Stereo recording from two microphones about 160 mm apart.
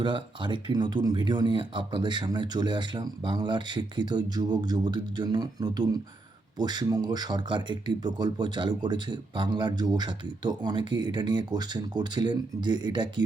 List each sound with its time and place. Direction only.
0.0 s speech: 30° right (ahead or behind)